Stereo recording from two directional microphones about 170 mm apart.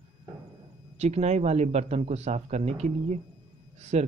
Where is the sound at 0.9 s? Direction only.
40° right (ahead or behind).